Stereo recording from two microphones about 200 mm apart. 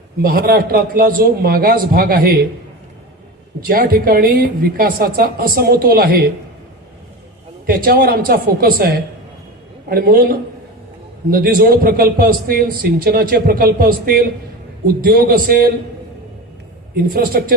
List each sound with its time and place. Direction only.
0.2 s a man's voice: 45° right (ahead or behind)
3.6 s a man's voice: 50° right (ahead or behind)
7.7 s a man's voice: 50° right (ahead or behind)
16.9 s a man's voice: 50° right (ahead or behind)